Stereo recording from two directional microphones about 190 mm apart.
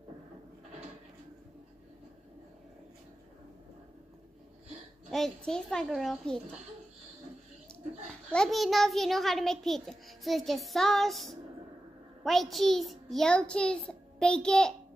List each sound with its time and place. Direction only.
5.1 s a child's voice: 5° left (ahead or behind)
8.3 s a child's voice: 5° left (ahead or behind)